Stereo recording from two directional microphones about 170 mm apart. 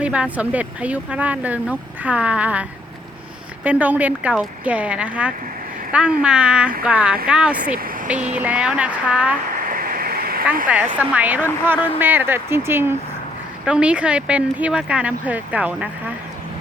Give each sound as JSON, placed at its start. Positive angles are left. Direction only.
{"t": 0.0, "sound": "speech", "side_deg": -5}
{"t": 9.6, "sound": "a sound", "side_deg": -55}
{"t": 10.7, "sound": "speech", "side_deg": -10}